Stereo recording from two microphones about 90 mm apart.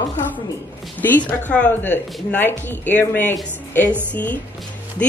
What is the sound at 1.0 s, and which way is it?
A woman's voice, 15° left (ahead or behind).